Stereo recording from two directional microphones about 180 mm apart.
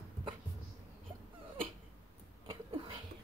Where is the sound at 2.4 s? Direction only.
30° right (ahead or behind).